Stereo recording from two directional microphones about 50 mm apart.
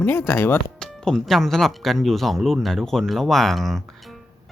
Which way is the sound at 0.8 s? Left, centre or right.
Centre.